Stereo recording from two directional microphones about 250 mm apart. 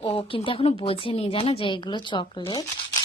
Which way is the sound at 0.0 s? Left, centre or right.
Left.